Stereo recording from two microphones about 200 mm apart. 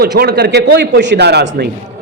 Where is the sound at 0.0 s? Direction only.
55° right (ahead or behind).